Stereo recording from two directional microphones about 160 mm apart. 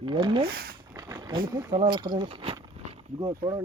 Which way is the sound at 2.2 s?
35° right (ahead or behind).